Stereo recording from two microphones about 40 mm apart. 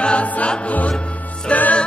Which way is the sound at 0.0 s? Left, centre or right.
Left.